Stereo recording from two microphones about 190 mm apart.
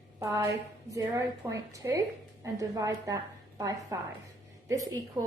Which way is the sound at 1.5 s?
15° right (ahead or behind).